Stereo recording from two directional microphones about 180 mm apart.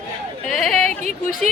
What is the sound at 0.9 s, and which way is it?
Speech, 40° right (ahead or behind).